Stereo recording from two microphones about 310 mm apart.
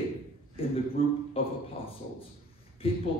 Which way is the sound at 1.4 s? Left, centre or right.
Centre.